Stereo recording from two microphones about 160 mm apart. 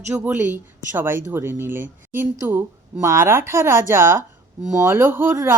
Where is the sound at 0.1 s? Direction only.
10° right (ahead or behind).